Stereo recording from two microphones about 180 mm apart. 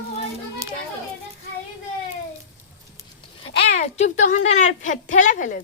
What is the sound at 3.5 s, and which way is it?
Speech, 40° left (ahead or behind).